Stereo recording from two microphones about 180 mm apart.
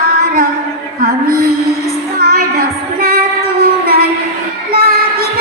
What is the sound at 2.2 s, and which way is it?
Child singing, 55° right (ahead or behind).